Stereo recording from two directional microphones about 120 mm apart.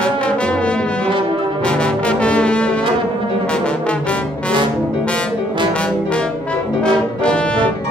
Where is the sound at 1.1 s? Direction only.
45° right (ahead or behind).